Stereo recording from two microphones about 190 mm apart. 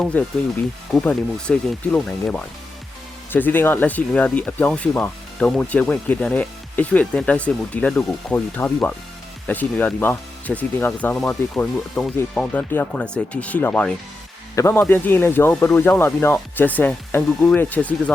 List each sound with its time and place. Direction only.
0.0 s speech: 5° left (ahead or behind)